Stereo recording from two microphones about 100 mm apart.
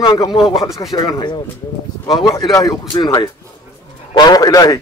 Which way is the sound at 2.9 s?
45° left (ahead or behind).